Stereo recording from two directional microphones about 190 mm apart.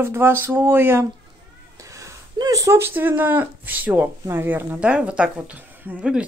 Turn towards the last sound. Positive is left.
turn(degrees=-5)  # may be behind; listen again after turning